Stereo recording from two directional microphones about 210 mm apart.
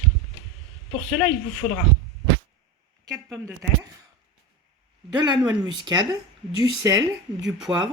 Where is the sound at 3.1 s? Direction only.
5° right (ahead or behind).